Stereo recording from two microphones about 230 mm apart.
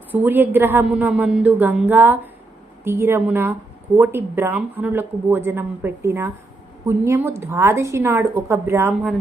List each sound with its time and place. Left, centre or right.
0.1 s speech: centre